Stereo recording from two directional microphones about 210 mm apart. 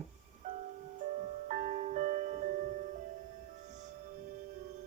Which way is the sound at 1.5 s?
35° right (ahead or behind).